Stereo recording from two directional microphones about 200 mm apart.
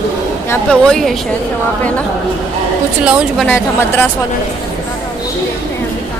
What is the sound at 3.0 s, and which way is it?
A woman's voice, centre (ahead or behind).